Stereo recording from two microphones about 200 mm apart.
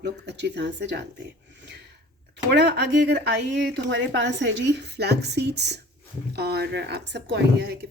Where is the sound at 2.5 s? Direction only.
60° right (ahead or behind).